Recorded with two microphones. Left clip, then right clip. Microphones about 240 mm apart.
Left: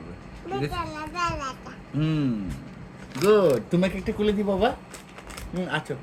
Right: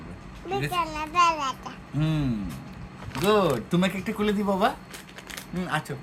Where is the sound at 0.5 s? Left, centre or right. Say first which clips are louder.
Right 3 dB; right.